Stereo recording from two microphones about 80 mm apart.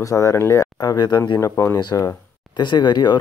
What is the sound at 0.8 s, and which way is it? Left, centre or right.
Speech, left.